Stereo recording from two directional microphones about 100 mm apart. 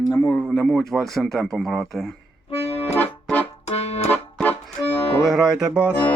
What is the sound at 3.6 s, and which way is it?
Accordion, 90° left.